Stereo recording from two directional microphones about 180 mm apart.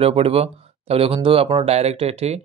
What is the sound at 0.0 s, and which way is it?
Speech, 35° right (ahead or behind).